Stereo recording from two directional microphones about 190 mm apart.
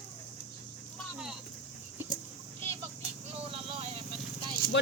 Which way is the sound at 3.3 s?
30° right (ahead or behind).